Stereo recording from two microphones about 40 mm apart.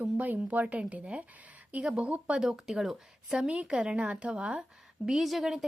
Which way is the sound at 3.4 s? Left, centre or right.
Right.